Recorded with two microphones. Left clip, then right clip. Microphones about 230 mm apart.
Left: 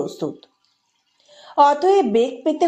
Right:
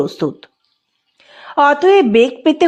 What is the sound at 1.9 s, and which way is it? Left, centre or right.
Speech, right.